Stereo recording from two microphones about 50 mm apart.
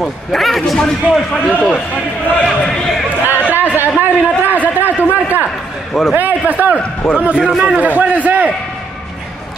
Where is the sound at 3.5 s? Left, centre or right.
Right.